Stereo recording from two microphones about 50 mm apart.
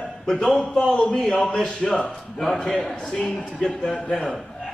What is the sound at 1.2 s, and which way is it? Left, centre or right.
Speech, centre.